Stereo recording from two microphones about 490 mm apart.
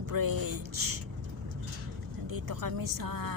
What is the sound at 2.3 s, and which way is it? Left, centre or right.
Music, right.